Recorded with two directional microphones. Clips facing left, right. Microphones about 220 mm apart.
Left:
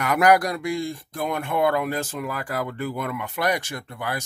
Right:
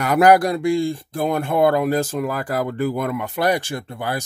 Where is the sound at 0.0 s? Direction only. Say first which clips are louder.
Right 4 dB; 30° right (ahead or behind).